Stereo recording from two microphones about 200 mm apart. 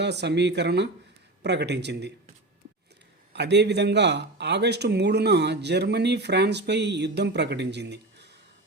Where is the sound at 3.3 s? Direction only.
60° right (ahead or behind).